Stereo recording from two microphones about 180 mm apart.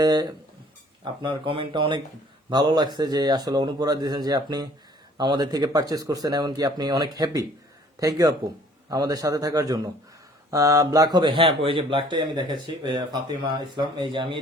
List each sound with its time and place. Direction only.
0.0 s speech: 20° right (ahead or behind)